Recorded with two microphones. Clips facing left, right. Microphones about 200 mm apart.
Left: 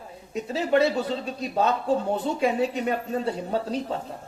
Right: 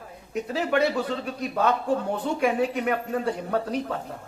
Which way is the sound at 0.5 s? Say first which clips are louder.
Left 2 dB; 30° left (ahead or behind).